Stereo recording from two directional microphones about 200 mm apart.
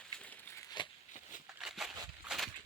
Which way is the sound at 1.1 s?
40° left (ahead or behind).